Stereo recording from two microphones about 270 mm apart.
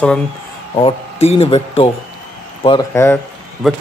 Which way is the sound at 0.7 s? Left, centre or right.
Left.